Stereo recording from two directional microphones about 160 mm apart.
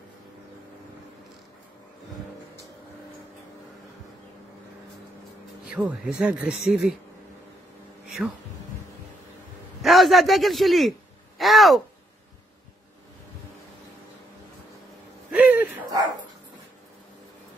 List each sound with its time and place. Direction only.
5.7 s speech: 5° right (ahead or behind)
8.2 s speech: 10° right (ahead or behind)
9.8 s a man's voice: centre (ahead or behind)
15.3 s a sound: 10° right (ahead or behind)